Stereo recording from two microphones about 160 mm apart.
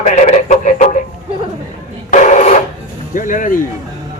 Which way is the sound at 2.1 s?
50° left (ahead or behind).